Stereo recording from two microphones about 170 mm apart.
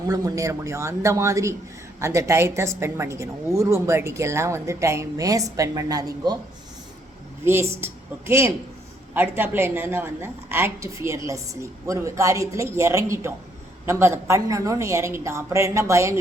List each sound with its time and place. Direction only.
0.1 s a woman's voice: 20° right (ahead or behind)
7.4 s a woman's voice: 15° right (ahead or behind)